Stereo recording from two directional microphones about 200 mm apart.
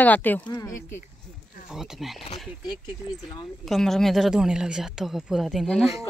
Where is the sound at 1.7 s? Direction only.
Centre (ahead or behind).